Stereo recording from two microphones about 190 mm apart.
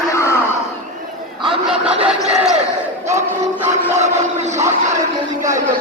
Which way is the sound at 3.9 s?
35° right (ahead or behind).